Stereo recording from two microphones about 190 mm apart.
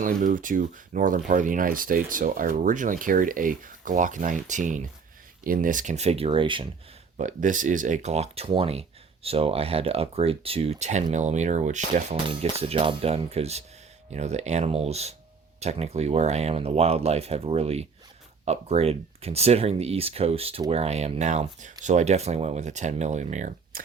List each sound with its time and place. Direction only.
0.0 s speech: 45° right (ahead or behind); by 6.7 s 25° right (ahead or behind)
7.2 s speech: 40° right (ahead or behind)
12.1 s speech: 30° right (ahead or behind)